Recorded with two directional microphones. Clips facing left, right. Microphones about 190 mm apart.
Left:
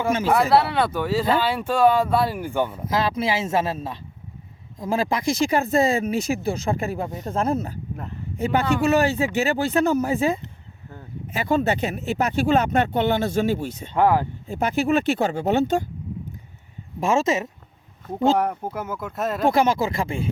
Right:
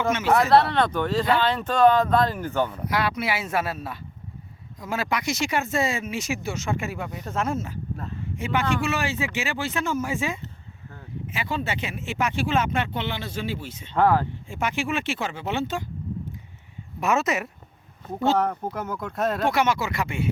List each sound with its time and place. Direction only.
0.3 s speech: 10° left (ahead or behind)
2.9 s speech: 25° left (ahead or behind); by 13.9 s 45° left (ahead or behind)
13.9 s speech: 15° left (ahead or behind)
14.4 s speech: 40° left (ahead or behind)
17.0 s speech: 30° left (ahead or behind)
18.3 s speech: 10° left (ahead or behind)
19.5 s speech: 30° left (ahead or behind)